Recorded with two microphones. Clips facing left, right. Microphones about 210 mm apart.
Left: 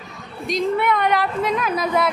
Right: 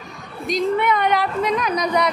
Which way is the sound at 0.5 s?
Centre (ahead or behind).